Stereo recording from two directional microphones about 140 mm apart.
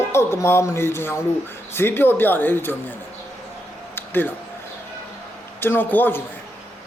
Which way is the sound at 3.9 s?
15° left (ahead or behind).